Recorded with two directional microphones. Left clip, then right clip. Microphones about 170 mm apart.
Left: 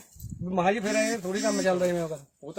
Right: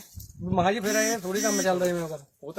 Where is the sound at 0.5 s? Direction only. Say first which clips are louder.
Right 1 dB; 20° left (ahead or behind).